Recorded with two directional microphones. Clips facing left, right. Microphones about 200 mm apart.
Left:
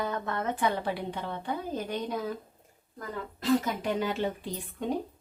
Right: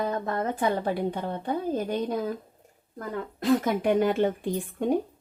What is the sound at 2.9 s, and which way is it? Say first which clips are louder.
Speech: right 5 dB; 50° right (ahead or behind).